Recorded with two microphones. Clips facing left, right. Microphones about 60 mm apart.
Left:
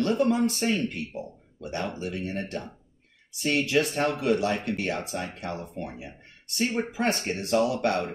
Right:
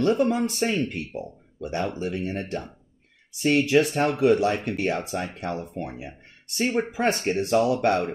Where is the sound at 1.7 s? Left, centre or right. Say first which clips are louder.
Right 4 dB; right.